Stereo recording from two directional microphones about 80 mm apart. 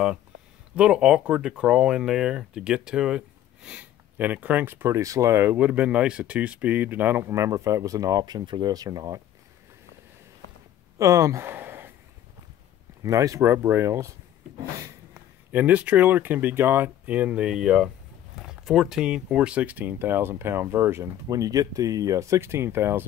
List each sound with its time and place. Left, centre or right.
0.7 s speech: centre
4.2 s speech: right
7.2 s speech: right
8.7 s speech: right
11.0 s speech: right
11.5 s a sound: right
13.0 s speech: right
15.5 s speech: centre
21.3 s speech: right